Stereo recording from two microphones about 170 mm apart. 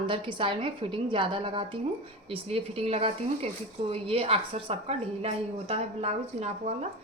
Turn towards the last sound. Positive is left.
turn(degrees=-40)  # may be behind; listen again after turning